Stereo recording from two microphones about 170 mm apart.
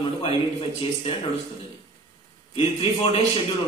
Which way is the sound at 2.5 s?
35° left (ahead or behind).